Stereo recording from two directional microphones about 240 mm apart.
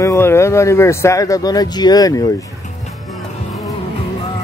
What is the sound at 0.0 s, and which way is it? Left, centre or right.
Speech, centre.